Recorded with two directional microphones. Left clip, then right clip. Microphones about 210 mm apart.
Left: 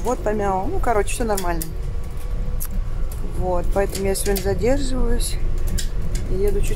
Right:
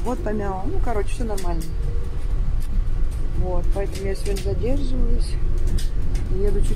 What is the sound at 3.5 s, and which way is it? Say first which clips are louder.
Speech: left 7 dB; 15° left (ahead or behind).